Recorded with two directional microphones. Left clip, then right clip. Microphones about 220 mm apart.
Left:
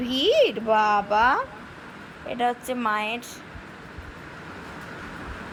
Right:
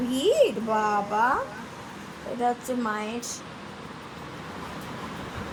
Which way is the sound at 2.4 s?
20° left (ahead or behind).